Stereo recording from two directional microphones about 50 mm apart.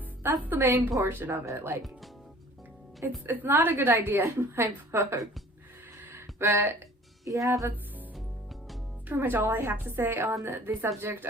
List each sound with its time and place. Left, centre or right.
0.5 s a woman's voice: right
1.0 s a woman's voice: right
3.2 s a woman's voice: right
4.2 s a woman's voice: right
6.1 s a sound: right
7.3 s speech: right
9.0 s a woman's voice: right